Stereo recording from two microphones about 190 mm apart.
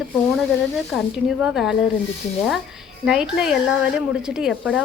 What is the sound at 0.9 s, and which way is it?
Speech, centre (ahead or behind).